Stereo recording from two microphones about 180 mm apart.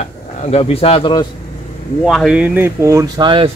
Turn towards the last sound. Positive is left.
turn(degrees=-25)  # may be behind; listen again after turning